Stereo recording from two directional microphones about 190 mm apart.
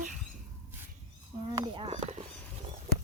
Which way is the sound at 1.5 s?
25° right (ahead or behind).